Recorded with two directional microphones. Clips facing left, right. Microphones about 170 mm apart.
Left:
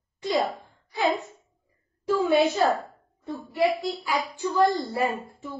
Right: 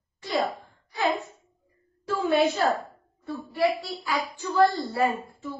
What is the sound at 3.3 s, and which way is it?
A woman's voice, 15° left (ahead or behind).